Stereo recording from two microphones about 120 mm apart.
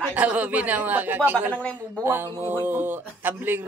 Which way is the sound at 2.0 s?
20° right (ahead or behind).